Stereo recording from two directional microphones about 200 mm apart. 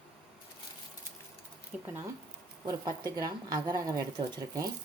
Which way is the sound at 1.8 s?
10° right (ahead or behind).